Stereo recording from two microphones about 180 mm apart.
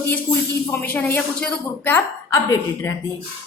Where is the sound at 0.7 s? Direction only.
10° left (ahead or behind).